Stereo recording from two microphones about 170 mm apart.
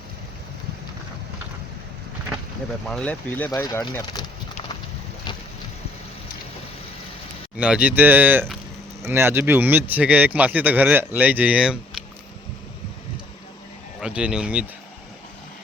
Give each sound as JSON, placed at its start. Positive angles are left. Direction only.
{"t": 2.8, "sound": "speech", "side_deg": 5}
{"t": 3.5, "sound": "speech", "side_deg": 20}
{"t": 7.6, "sound": "speech", "side_deg": -10}
{"t": 14.0, "sound": "a man's voice", "side_deg": -5}